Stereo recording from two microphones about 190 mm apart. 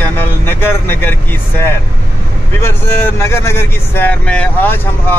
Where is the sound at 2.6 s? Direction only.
10° left (ahead or behind).